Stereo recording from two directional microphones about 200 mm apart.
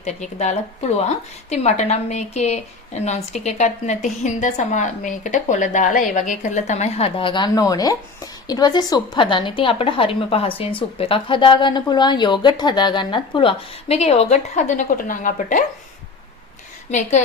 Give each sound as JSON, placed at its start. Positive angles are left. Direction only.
{"t": 0.0, "sound": "a woman's voice", "side_deg": 35}
{"t": 16.9, "sound": "speech", "side_deg": 35}